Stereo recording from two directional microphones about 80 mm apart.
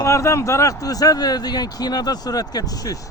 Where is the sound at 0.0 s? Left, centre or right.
Left.